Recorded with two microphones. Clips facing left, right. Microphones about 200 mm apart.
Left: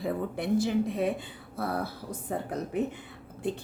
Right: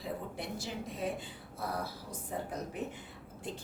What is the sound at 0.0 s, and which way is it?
A woman's voice, 60° left (ahead or behind).